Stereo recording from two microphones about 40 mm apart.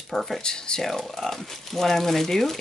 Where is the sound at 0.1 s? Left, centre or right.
Centre.